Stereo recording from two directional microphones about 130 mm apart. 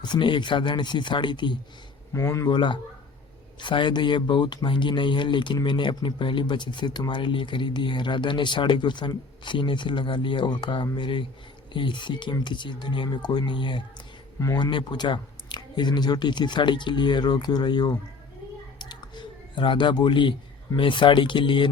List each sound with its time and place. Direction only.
0.0 s speech: 35° left (ahead or behind)
2.1 s speech: 25° left (ahead or behind)
2.5 s speech: 35° left (ahead or behind)
14.3 s speech: 25° left (ahead or behind)
14.6 s speech: 35° left (ahead or behind)
18.8 s a sound: 35° left (ahead or behind)
20.7 s speech: 40° left (ahead or behind)